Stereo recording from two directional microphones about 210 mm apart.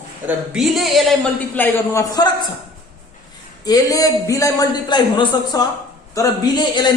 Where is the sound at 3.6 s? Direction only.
15° left (ahead or behind).